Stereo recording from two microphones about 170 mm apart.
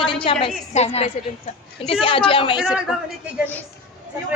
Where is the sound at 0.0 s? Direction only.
30° left (ahead or behind).